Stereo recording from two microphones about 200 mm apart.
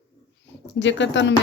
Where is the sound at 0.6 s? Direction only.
65° left (ahead or behind).